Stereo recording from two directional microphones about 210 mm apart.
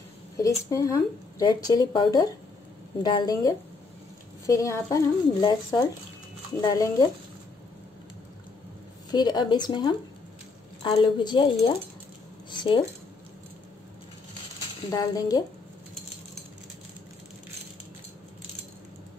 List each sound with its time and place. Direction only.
0.4 s a woman's voice: 15° left (ahead or behind)
9.1 s a woman's voice: 20° left (ahead or behind)
14.9 s speech: 15° left (ahead or behind)